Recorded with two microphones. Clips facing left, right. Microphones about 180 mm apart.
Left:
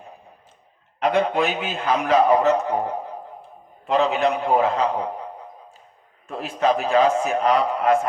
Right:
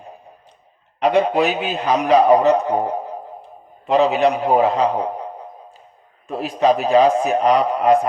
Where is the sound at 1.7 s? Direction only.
15° right (ahead or behind).